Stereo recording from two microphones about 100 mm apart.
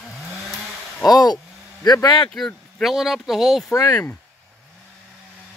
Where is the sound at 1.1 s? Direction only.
40° left (ahead or behind).